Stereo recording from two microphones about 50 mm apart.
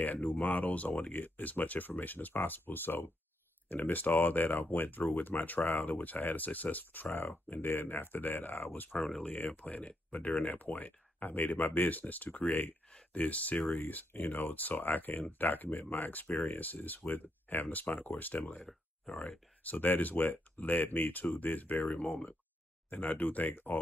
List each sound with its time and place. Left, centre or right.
0.0 s speech: left
8.9 s speech: centre
9.2 s speech: left